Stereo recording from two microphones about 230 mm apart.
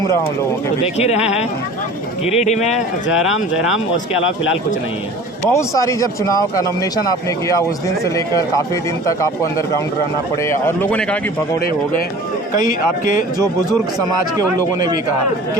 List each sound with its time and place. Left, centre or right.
0.9 s speech: left
2.7 s speech: centre
5.5 s speech: centre
10.4 s speech: centre